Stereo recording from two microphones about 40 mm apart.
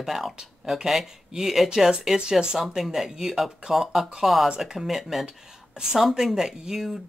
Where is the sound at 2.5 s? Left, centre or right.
Centre.